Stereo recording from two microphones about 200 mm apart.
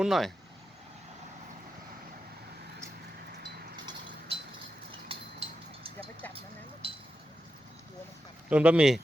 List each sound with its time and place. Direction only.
0.0 s speech: centre (ahead or behind)
5.0 s vehicle: 30° right (ahead or behind)
8.4 s speech: 5° right (ahead or behind)